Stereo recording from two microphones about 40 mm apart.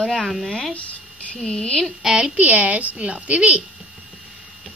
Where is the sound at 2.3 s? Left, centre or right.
Right.